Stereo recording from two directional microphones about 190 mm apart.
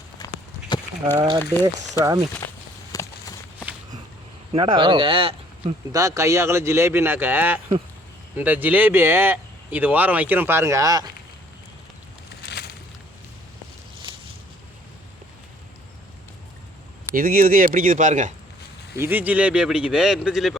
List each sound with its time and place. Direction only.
0.2 s clip-clop: 20° left (ahead or behind)
1.1 s speech: 20° right (ahead or behind)
2.9 s walk: 15° left (ahead or behind)
4.5 s speech: 25° right (ahead or behind)
6.0 s speech: 15° right (ahead or behind)
12.4 s a sound: 60° left (ahead or behind)
17.2 s speech: 50° right (ahead or behind)
18.9 s speech: 10° right (ahead or behind)